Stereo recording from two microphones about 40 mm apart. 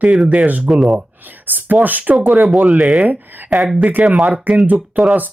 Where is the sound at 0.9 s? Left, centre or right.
Right.